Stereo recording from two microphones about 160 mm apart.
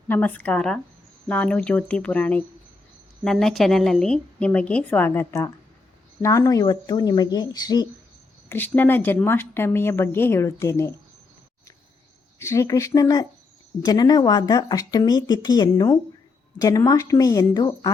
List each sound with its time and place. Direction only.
0.1 s a woman's voice: 10° left (ahead or behind); by 7.9 s 25° left (ahead or behind)
8.4 s a woman's voice: 10° left (ahead or behind)
12.4 s speech: 15° left (ahead or behind)